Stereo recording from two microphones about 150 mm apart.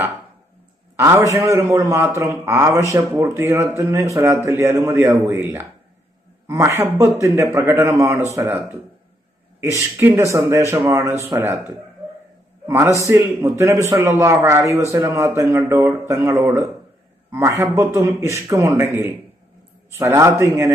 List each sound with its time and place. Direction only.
0.9 s a man's voice: 20° right (ahead or behind)
12.6 s a man's voice: 20° right (ahead or behind)